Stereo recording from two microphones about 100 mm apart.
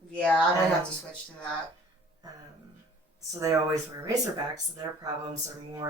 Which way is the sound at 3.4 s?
35° right (ahead or behind).